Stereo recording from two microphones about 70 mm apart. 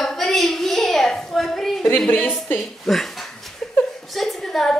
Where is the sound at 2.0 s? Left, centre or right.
Centre.